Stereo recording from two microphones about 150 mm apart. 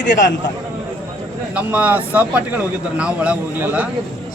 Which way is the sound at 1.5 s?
10° right (ahead or behind).